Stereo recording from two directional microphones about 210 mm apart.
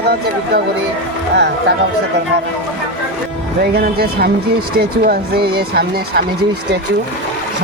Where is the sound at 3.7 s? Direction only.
45° right (ahead or behind).